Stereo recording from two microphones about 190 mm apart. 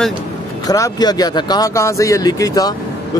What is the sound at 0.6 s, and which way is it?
Speech, 20° left (ahead or behind).